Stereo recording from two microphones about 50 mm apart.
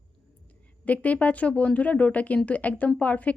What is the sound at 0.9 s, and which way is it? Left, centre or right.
Speech, left.